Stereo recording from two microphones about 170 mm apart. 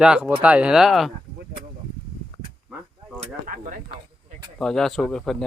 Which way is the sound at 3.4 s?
50° right (ahead or behind).